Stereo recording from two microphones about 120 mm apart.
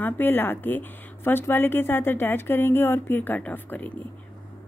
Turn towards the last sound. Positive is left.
turn(degrees=15)  # may be behind; listen again after turning